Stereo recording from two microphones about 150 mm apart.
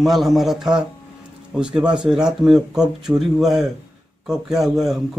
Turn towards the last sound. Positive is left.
turn(degrees=0)  # may be behind; listen again after turning